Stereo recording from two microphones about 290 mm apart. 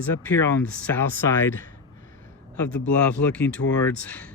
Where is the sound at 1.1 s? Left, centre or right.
Right.